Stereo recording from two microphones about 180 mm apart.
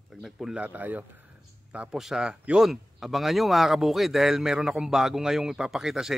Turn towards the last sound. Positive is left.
turn(degrees=0)  # may be behind; listen again after turning